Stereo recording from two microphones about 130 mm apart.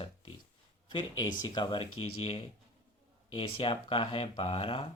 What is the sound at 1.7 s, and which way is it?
Speech, 50° left (ahead or behind).